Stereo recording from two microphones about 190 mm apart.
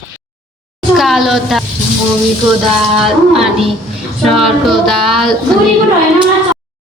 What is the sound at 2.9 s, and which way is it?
Female singing, centre (ahead or behind).